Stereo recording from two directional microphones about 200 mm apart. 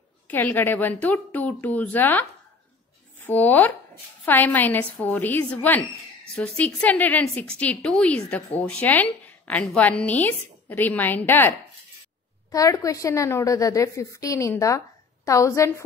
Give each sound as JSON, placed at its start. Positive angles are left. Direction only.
{"t": 0.3, "sound": "a woman's voice", "side_deg": 10}